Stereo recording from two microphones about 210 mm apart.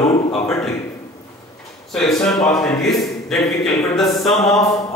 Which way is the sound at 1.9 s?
Centre (ahead or behind).